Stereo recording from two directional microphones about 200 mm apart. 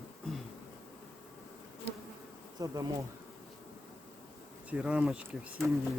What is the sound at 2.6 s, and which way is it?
Bee, 20° right (ahead or behind).